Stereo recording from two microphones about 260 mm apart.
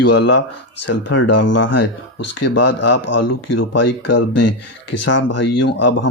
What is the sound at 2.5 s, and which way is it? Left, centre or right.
Speech, left.